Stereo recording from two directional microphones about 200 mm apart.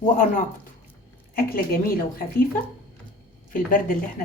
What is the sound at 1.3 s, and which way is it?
Speech, 45° left (ahead or behind).